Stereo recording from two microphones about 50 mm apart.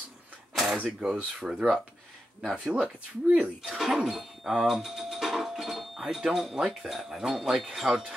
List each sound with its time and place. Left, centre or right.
1.0 s speech: right
3.6 s music: centre
6.1 s speech: centre